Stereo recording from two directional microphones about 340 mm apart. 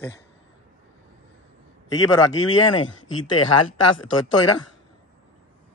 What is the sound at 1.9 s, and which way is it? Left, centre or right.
Speech, centre.